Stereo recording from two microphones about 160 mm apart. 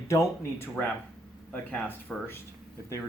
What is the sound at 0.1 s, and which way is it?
Speech, 15° left (ahead or behind).